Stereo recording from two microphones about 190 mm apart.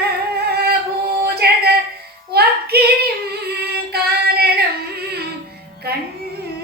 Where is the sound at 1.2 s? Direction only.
55° right (ahead or behind).